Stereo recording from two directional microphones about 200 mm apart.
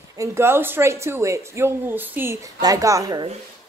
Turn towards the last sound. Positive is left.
turn(degrees=-20)  # may be behind; listen again after turning